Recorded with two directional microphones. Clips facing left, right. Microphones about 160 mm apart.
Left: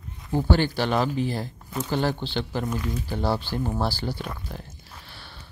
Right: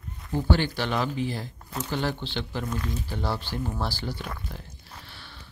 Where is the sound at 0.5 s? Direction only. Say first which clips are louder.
Left 4 dB; 40° left (ahead or behind).